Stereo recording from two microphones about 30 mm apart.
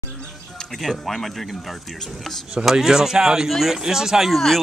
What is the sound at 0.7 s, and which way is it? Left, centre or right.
Speech, centre.